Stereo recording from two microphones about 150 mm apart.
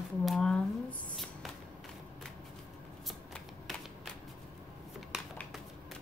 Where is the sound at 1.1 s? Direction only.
Centre (ahead or behind).